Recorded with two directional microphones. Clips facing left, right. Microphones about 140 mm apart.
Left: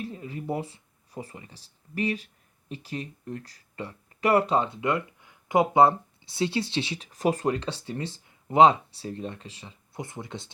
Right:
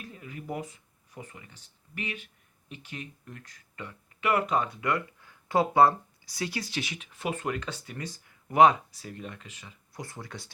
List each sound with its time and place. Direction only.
0.0 s speech: 30° left (ahead or behind)